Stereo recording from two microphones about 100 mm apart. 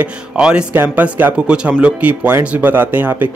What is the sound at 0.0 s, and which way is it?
Speech, 10° right (ahead or behind).